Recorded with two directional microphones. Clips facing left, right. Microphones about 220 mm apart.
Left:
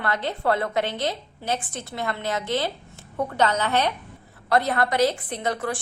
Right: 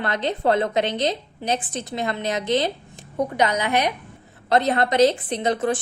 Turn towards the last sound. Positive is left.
turn(degrees=-20)  # may be behind; listen again after turning